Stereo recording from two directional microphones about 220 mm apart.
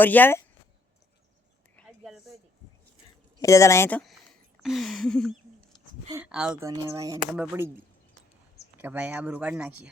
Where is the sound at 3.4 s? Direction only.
15° left (ahead or behind); by 7.7 s 5° right (ahead or behind).